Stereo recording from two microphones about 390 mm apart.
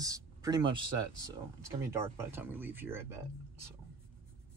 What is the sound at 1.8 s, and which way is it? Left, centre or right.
Speech, centre.